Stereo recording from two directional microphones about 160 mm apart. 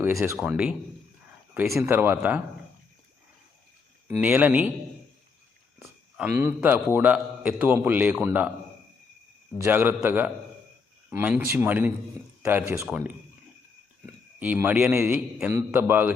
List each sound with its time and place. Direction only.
0.0 s a man's voice: 15° right (ahead or behind)
0.3 s a man's voice: 5° right (ahead or behind)
4.1 s a man's voice: 10° right (ahead or behind)
6.1 s a man's voice: 15° right (ahead or behind)
9.6 s a man's voice: 15° right (ahead or behind)
14.3 s a man's voice: 10° right (ahead or behind)